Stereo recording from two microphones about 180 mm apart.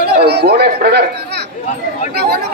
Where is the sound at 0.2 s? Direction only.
65° right (ahead or behind).